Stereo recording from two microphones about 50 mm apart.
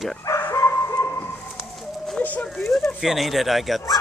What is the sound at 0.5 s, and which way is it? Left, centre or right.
Dog, left.